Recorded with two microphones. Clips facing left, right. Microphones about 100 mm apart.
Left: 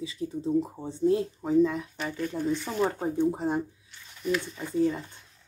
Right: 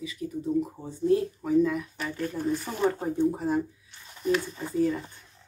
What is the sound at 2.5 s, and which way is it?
Speech, 40° right (ahead or behind).